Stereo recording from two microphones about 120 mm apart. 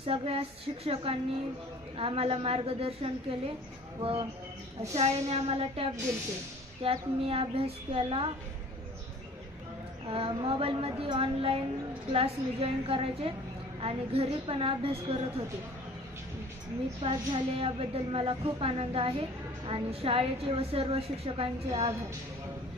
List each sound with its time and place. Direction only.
0.0 s a woman's voice: 50° right (ahead or behind)
4.9 s a woman's voice: 60° right (ahead or behind)
10.0 s a woman's voice: 50° right (ahead or behind)
17.0 s a woman's voice: 55° right (ahead or behind)